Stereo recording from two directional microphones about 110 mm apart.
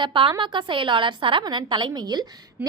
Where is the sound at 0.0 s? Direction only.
50° right (ahead or behind).